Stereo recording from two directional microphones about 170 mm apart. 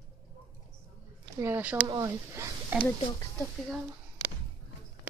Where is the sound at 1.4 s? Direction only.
10° right (ahead or behind).